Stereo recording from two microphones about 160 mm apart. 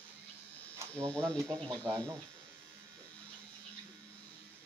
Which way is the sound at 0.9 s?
10° left (ahead or behind).